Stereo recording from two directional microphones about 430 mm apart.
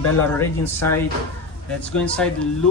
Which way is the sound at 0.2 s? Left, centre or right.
Centre.